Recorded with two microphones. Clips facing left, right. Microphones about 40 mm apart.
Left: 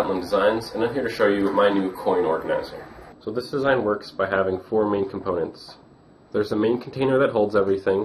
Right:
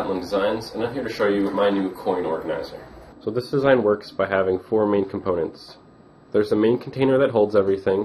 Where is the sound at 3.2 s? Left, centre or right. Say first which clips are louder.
Right 3 dB; centre.